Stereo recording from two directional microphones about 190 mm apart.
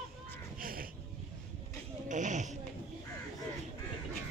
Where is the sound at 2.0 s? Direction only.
40° right (ahead or behind).